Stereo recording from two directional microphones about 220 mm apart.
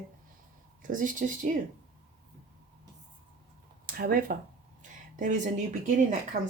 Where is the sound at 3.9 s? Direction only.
40° right (ahead or behind).